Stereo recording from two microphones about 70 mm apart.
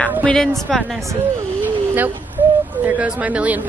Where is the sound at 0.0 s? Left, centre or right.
Centre.